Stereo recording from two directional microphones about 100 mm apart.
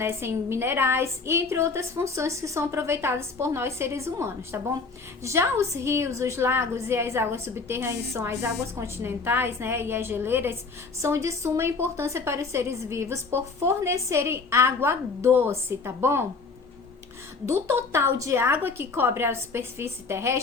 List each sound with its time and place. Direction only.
0.0 s a woman's voice: 25° right (ahead or behind)
17.4 s a woman's voice: 25° right (ahead or behind)